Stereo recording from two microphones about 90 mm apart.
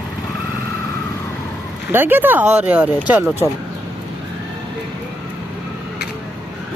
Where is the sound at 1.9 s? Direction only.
25° right (ahead or behind).